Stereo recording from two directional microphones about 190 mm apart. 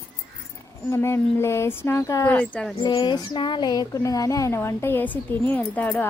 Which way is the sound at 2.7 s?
20° left (ahead or behind).